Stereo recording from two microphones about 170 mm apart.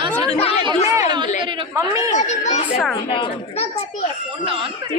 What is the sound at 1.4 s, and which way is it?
Speech, 20° right (ahead or behind).